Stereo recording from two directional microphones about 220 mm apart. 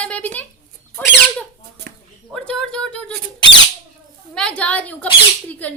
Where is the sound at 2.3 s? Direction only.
5° left (ahead or behind).